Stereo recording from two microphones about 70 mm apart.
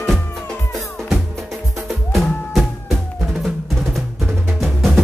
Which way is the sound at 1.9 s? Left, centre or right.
Centre.